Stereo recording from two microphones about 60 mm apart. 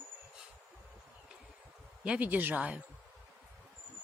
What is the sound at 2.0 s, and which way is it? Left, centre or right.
Speech, right.